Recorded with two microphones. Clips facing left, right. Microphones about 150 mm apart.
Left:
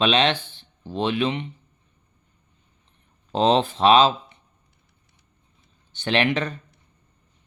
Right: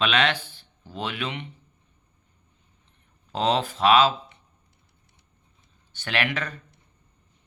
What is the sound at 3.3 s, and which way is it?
Speech, 25° left (ahead or behind).